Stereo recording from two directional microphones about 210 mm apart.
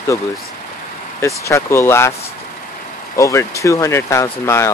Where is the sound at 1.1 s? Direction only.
15° left (ahead or behind).